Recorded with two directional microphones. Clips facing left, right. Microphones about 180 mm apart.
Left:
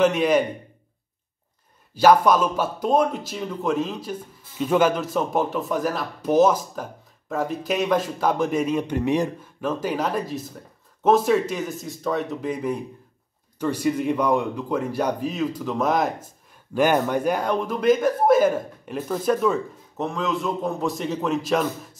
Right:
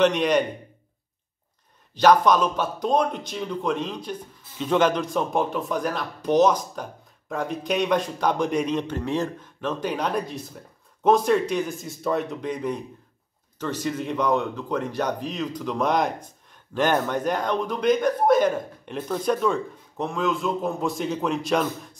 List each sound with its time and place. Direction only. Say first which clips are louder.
0.0 s a man's voice: left 1 dB; 5° left (ahead or behind)
2.0 s a man's voice: left 1 dB; 5° left (ahead or behind)